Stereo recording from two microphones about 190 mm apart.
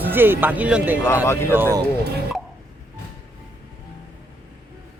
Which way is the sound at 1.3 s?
15° left (ahead or behind).